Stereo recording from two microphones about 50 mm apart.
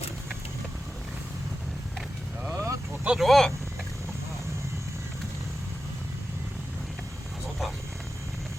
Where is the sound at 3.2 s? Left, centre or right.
Centre.